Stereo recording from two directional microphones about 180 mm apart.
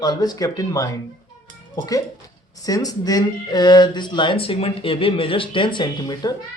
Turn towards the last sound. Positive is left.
turn(degrees=20)  # may be behind; listen again after turning